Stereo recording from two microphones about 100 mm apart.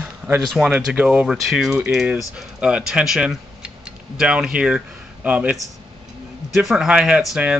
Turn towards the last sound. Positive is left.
turn(degrees=-10)  # may be behind; listen again after turning